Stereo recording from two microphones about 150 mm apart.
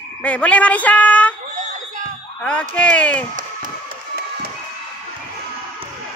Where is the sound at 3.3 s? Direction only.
65° right (ahead or behind).